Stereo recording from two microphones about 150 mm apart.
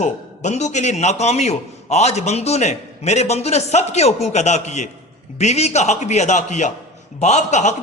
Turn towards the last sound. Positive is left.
turn(degrees=50)  # may be behind; listen again after turning